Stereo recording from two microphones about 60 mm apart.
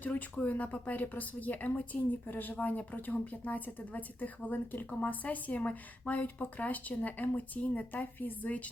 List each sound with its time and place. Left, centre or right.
0.0 s speech: left